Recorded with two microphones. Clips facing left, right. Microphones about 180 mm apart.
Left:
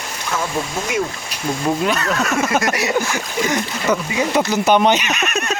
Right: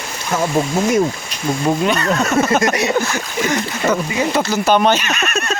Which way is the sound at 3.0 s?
15° left (ahead or behind).